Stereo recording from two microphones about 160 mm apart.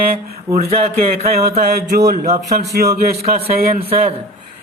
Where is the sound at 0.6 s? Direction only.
45° right (ahead or behind).